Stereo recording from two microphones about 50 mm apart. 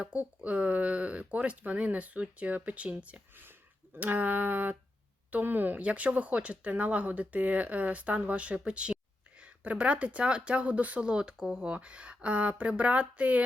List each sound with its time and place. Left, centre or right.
0.1 s speech: right
3.9 s a sound: right
5.8 s speech: right
11.1 s speech: centre